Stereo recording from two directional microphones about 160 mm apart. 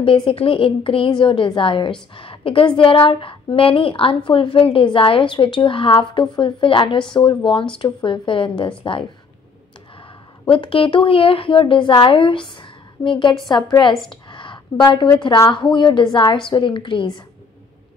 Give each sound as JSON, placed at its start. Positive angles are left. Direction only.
{"t": 0.0, "sound": "a woman's voice", "side_deg": 35}
{"t": 10.5, "sound": "a woman's voice", "side_deg": 35}
{"t": 14.3, "sound": "a sound", "side_deg": 30}
{"t": 15.2, "sound": "a woman's voice", "side_deg": 25}